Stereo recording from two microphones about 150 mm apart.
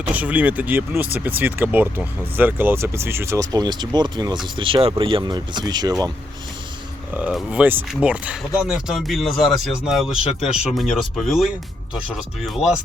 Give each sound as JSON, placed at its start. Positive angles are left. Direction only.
{"t": 0.1, "sound": "speech", "side_deg": -10}
{"t": 7.1, "sound": "speech", "side_deg": -5}
{"t": 12.5, "sound": "speech", "side_deg": -5}